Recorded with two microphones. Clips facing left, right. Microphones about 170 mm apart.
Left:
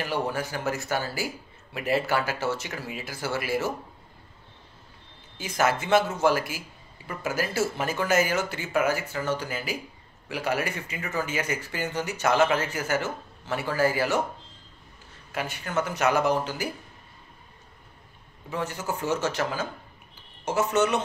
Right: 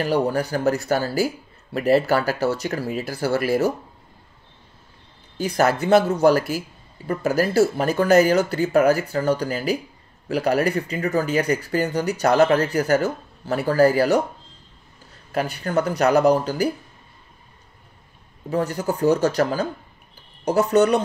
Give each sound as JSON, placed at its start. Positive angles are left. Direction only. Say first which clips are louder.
{"t": 0.0, "sound": "speech", "louder": "right 8 dB", "side_deg": -40}
{"t": 5.4, "sound": "speech", "louder": "right 6 dB", "side_deg": -40}
{"t": 15.3, "sound": "speech", "louder": "right 7 dB", "side_deg": -35}
{"t": 18.5, "sound": "speech", "louder": "right 8 dB", "side_deg": -35}